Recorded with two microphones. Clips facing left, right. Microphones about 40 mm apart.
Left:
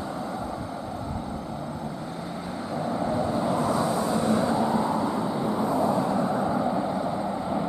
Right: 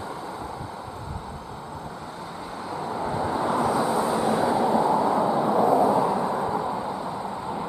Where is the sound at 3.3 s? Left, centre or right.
Right; by 7.7 s centre.